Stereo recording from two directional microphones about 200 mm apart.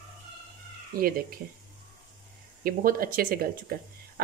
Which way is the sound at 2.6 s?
45° right (ahead or behind).